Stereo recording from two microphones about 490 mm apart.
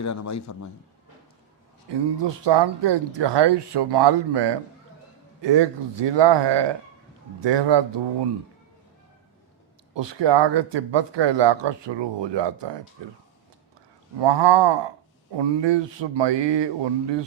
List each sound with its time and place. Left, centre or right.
0.0 s a man's voice: left
1.9 s speech: right
9.9 s speech: right
14.2 s speech: right